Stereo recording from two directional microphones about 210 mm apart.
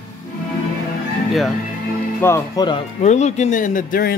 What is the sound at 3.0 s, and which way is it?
A man's voice, 35° left (ahead or behind).